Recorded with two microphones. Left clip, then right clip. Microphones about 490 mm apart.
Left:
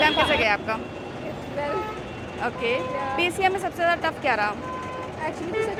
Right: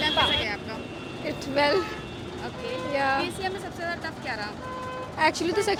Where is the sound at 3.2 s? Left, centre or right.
Centre.